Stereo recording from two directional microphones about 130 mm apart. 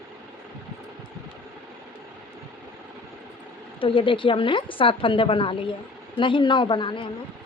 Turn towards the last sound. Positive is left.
turn(degrees=40)  # may be behind; listen again after turning